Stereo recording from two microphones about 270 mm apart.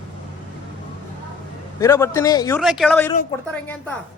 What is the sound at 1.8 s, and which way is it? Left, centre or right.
Speech, centre.